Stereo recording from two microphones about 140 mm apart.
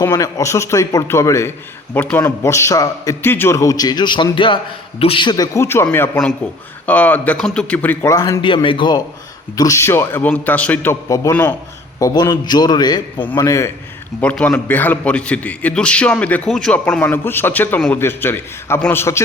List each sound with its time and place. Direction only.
0.1 s a man's voice: 25° left (ahead or behind)
3.2 s a man's voice: 15° left (ahead or behind)
8.1 s a man's voice: 25° left (ahead or behind)
9.6 s a man's voice: 20° left (ahead or behind)
11.1 s a man's voice: 25° left (ahead or behind)
13.1 s a man's voice: 15° left (ahead or behind)
14.2 s a man's voice: 10° left (ahead or behind)